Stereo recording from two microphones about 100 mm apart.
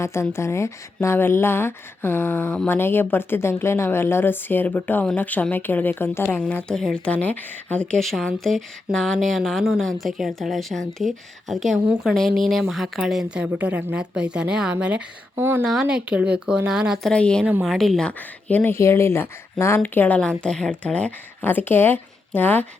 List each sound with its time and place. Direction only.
0.0 s a woman's voice: 25° left (ahead or behind); by 15.0 s 10° right (ahead or behind)
15.4 s speech: 20° right (ahead or behind)
15.6 s a woman's voice: 5° right (ahead or behind)
17.0 s a woman's voice: 10° left (ahead or behind)